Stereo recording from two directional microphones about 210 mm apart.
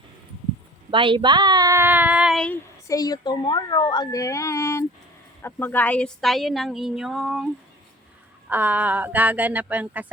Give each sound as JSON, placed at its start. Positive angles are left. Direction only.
{"t": 0.9, "sound": "a woman's voice", "side_deg": -25}
{"t": 2.8, "sound": "speech", "side_deg": 15}
{"t": 8.4, "sound": "a woman's voice", "side_deg": -10}